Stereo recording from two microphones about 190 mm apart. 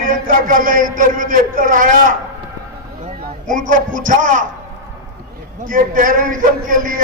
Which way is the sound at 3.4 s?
45° right (ahead or behind).